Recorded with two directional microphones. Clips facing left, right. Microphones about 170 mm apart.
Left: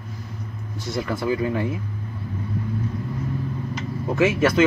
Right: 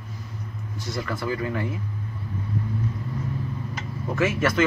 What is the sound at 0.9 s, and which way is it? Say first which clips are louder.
Speech: left 5 dB; 20° left (ahead or behind).